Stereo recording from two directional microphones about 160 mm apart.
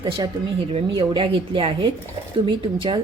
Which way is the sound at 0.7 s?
35° right (ahead or behind).